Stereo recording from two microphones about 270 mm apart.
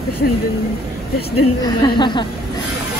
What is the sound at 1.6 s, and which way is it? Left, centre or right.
Speech, centre.